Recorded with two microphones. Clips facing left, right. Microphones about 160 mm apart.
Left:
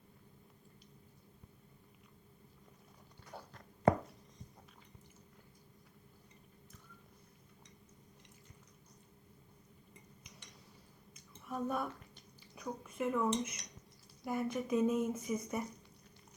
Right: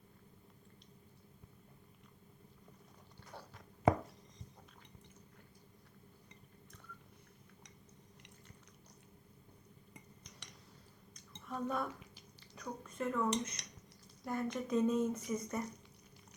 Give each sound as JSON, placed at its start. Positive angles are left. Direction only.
{"t": 3.5, "sound": "a sound", "side_deg": -5}
{"t": 11.1, "sound": "drip", "side_deg": 5}
{"t": 12.6, "sound": "speech", "side_deg": 10}
{"t": 13.6, "sound": "cutlery", "side_deg": -75}
{"t": 14.3, "sound": "speech", "side_deg": 5}